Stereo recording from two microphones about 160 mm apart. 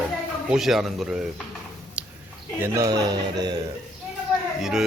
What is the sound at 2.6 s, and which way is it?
Speech, 20° right (ahead or behind).